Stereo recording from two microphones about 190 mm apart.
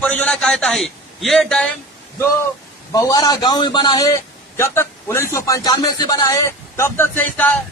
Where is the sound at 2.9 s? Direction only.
20° left (ahead or behind).